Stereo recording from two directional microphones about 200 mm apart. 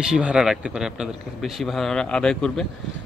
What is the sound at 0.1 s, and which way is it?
Speech, 5° right (ahead or behind).